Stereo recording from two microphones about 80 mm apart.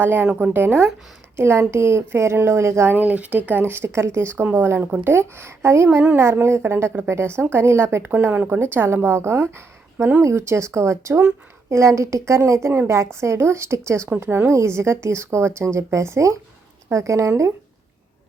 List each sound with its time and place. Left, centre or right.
0.0 s speech: right
2.9 s speech: centre; by 17.5 s right